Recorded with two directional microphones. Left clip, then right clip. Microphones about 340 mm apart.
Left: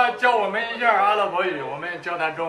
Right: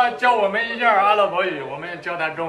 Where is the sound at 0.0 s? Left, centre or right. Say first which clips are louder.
Right 2 dB; centre.